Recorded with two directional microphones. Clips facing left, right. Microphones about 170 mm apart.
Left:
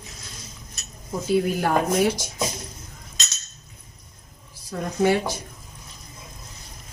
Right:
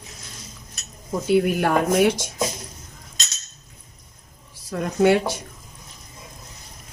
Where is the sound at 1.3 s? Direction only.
65° right (ahead or behind).